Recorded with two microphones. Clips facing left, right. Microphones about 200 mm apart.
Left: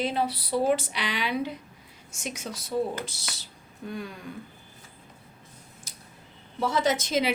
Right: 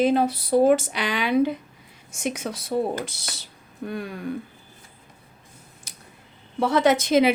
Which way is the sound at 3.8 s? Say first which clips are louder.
Right 5 dB; 60° right (ahead or behind).